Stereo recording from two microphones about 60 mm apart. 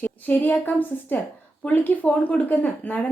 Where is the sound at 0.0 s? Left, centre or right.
Left.